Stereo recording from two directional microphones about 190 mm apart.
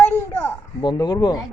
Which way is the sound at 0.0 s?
10° left (ahead or behind).